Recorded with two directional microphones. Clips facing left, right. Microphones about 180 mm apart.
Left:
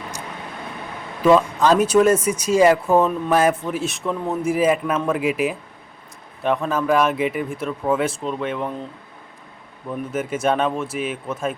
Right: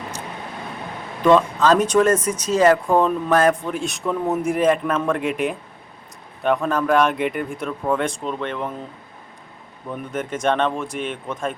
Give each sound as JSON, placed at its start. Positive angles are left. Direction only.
{"t": 1.2, "sound": "speech", "side_deg": 10}
{"t": 9.9, "sound": "speech", "side_deg": 5}